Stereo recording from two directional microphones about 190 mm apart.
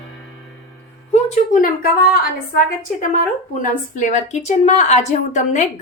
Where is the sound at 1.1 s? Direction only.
40° left (ahead or behind).